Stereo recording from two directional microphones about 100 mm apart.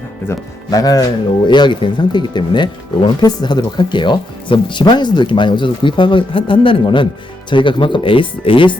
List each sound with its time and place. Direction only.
0.3 s speech: 25° left (ahead or behind)
0.7 s speech: 40° left (ahead or behind)
1.5 s speech: 50° left (ahead or behind)